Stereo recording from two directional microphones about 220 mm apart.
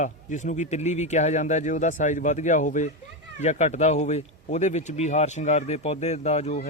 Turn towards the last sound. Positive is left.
turn(degrees=30)  # may be behind; listen again after turning